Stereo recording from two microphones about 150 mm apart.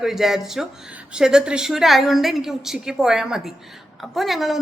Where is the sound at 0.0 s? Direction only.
Centre (ahead or behind).